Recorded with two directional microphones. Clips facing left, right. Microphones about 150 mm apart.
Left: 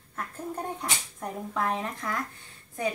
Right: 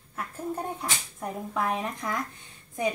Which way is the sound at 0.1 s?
10° right (ahead or behind).